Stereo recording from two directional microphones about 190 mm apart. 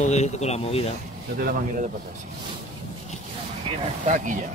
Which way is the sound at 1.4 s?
50° right (ahead or behind).